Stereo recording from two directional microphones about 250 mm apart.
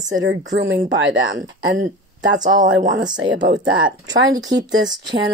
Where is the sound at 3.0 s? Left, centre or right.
Centre.